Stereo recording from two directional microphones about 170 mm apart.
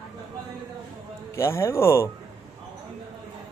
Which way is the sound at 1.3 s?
15° left (ahead or behind).